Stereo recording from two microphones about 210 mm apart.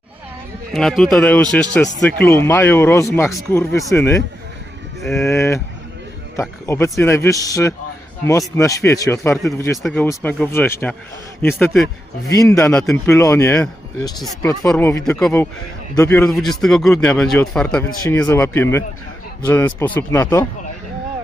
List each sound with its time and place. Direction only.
0.7 s a man's voice: centre (ahead or behind)
5.2 s a man's voice: 15° left (ahead or behind)
12.3 s a man's voice: 15° left (ahead or behind)